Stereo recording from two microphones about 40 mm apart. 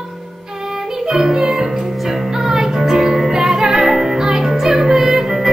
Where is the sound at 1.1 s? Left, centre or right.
Centre.